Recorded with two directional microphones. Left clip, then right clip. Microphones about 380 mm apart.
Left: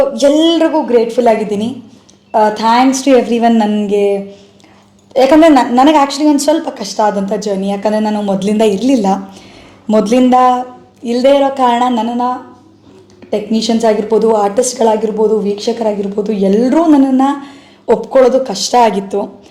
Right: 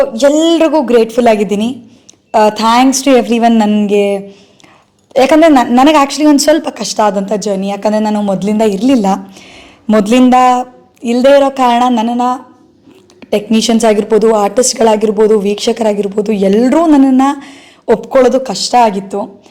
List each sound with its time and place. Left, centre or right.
0.0 s a woman's voice: right